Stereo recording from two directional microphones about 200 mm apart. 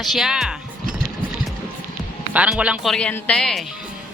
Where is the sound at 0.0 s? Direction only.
Centre (ahead or behind).